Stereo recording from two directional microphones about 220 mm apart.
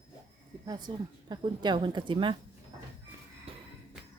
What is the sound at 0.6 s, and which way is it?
Speech, 20° right (ahead or behind).